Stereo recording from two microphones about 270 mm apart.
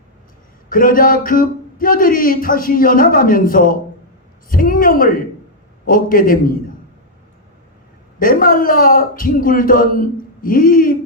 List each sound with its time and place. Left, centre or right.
0.7 s speech: left
8.2 s speech: left